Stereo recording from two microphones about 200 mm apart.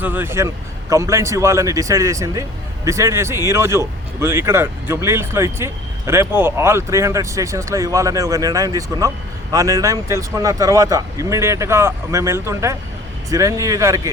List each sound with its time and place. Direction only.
0.0 s speech: 10° right (ahead or behind)